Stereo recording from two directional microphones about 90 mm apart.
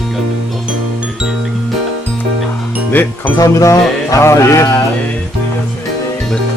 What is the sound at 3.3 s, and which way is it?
Music, 40° left (ahead or behind).